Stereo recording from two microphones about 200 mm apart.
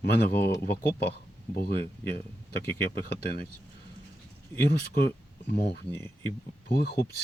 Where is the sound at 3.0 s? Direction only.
50° left (ahead or behind).